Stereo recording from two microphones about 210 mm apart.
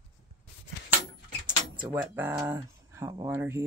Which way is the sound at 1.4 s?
20° right (ahead or behind).